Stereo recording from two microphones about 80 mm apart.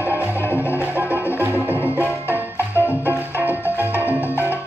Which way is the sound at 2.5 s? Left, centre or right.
Left.